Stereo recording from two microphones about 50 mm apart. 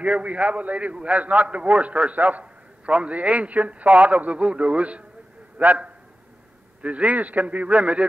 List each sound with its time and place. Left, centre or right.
0.0 s a man's voice: right
6.8 s a man's voice: right